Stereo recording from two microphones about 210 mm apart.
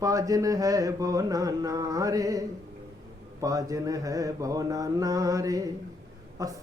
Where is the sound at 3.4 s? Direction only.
15° right (ahead or behind).